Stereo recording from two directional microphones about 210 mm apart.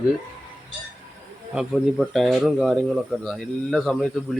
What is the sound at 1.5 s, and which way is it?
Speech, centre (ahead or behind).